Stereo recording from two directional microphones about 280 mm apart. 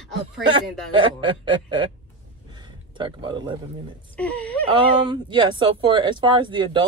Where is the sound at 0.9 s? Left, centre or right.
Centre.